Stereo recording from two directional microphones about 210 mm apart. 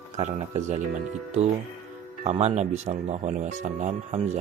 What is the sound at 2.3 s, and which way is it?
Speech, 30° right (ahead or behind).